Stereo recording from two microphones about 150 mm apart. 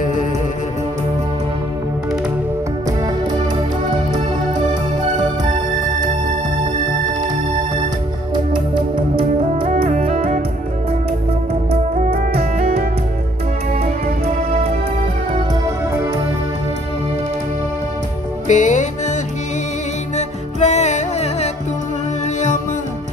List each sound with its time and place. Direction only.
8.9 s music: 35° right (ahead or behind)
14.2 s music: 45° right (ahead or behind)
18.5 s music: 55° left (ahead or behind)
20.2 s music: 50° left (ahead or behind)